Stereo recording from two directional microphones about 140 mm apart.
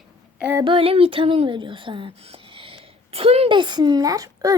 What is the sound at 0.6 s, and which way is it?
Speech, 40° right (ahead or behind).